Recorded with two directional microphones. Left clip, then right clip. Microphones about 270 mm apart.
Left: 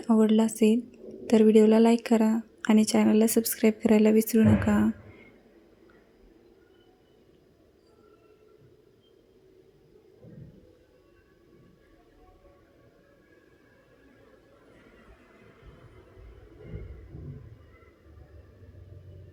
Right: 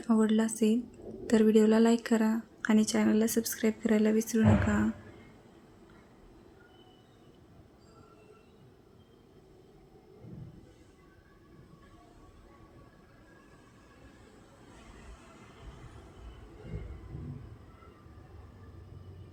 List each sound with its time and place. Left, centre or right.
0.0 s a woman's voice: centre